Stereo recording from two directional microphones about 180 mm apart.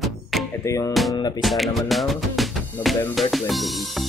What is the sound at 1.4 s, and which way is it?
Music, centre (ahead or behind).